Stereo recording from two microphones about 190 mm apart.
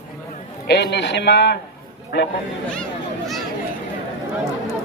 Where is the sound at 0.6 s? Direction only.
60° left (ahead or behind).